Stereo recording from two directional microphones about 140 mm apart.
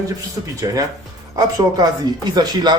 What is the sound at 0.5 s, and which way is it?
Speech, 25° right (ahead or behind).